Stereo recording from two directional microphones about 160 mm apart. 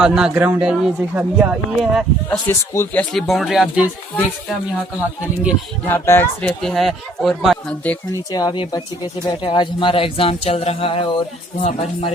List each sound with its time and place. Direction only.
0.0 s speech: 5° right (ahead or behind)
2.5 s speech: 15° left (ahead or behind); by 3.8 s 5° right (ahead or behind)
5.8 s speech: 15° left (ahead or behind)
8.3 s speech: 25° left (ahead or behind); by 12.1 s 45° left (ahead or behind)